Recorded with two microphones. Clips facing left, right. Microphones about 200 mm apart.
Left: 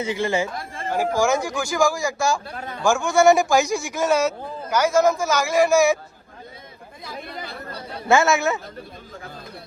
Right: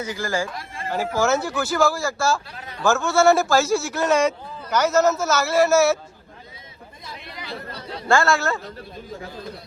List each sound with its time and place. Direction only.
0.0 s speech: 25° left (ahead or behind)
0.9 s a man's voice: 15° left (ahead or behind)
2.5 s speech: 50° left (ahead or behind)
2.8 s a man's voice: 15° left (ahead or behind)
7.2 s chatter: 50° left (ahead or behind)
8.0 s speech: 20° left (ahead or behind)